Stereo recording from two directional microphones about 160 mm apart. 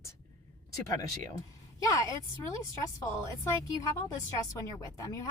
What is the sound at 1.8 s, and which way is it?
Speech, 20° left (ahead or behind).